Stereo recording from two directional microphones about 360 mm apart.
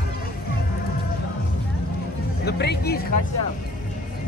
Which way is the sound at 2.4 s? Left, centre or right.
Left.